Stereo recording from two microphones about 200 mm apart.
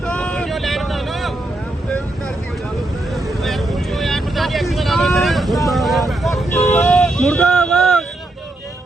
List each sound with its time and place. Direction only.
0.0 s boat: 5° left (ahead or behind)
3.4 s vehicle: centre (ahead or behind)